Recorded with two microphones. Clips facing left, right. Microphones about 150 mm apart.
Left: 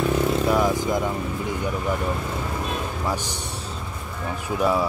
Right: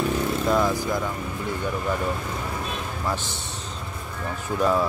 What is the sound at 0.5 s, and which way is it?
Speech, 15° left (ahead or behind).